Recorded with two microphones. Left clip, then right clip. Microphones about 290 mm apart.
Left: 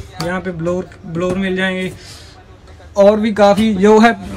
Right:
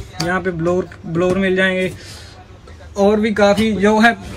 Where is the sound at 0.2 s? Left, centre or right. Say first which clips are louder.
Right 2 dB; centre.